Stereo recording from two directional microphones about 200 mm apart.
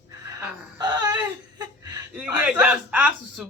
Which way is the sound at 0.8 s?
20° right (ahead or behind).